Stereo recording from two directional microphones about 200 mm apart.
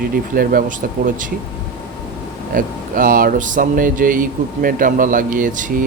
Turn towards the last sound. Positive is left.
turn(degrees=-40)  # may be behind; listen again after turning